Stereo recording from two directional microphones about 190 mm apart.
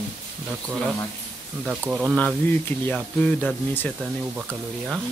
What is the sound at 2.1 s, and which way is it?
Speech, 10° left (ahead or behind).